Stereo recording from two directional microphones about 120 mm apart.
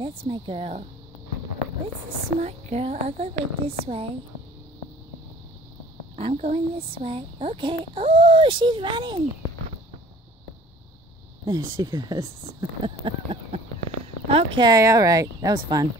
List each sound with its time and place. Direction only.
0.0 s speech: 45° right (ahead or behind)
2.4 s a woman's voice: 65° right (ahead or behind)
6.1 s speech: 60° right (ahead or behind); by 9.2 s 40° right (ahead or behind)
11.4 s speech: 30° right (ahead or behind); by 13.6 s 50° right (ahead or behind)
14.2 s a sound: 55° right (ahead or behind)
14.6 s speech: 30° right (ahead or behind)